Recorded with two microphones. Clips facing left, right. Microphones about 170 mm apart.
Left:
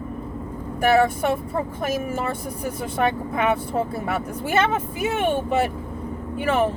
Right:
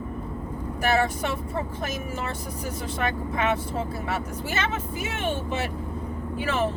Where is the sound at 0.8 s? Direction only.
55° left (ahead or behind).